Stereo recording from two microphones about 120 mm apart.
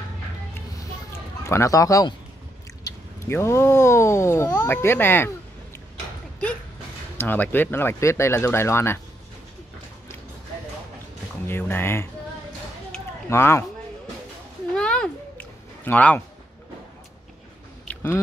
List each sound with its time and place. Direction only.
1.4 s speech: 25° left (ahead or behind)
7.2 s speech: 15° left (ahead or behind)
11.4 s speech: 20° left (ahead or behind)
13.3 s speech: 20° left (ahead or behind)
14.8 s a sound: 10° left (ahead or behind)
17.8 s a sound: 20° left (ahead or behind)